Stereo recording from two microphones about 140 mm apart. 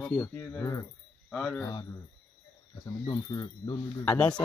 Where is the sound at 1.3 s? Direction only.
Centre (ahead or behind).